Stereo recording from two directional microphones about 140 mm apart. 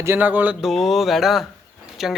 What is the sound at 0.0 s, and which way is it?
Speech, 15° right (ahead or behind).